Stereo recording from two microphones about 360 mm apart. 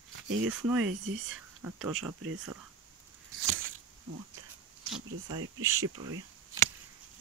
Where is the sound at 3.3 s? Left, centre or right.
Right.